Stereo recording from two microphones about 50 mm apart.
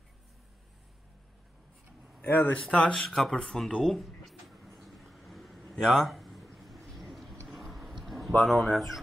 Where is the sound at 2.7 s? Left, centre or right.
Left.